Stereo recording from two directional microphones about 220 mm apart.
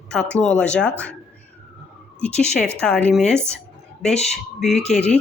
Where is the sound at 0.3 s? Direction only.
5° left (ahead or behind).